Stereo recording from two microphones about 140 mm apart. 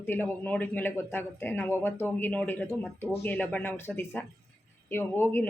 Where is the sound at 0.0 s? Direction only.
15° left (ahead or behind).